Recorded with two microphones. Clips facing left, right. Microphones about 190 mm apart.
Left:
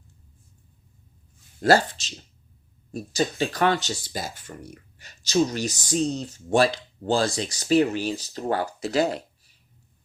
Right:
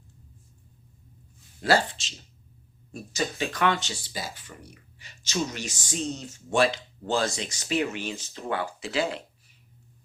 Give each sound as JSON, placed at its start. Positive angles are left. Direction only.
{"t": 1.6, "sound": "speech", "side_deg": 40}